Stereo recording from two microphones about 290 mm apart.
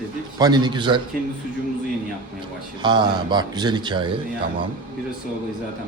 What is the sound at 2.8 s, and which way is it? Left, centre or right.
Speech, centre.